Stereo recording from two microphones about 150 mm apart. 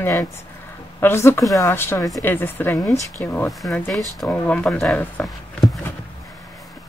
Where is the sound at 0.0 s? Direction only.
15° left (ahead or behind).